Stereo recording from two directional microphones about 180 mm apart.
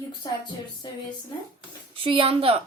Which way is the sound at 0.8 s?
25° left (ahead or behind).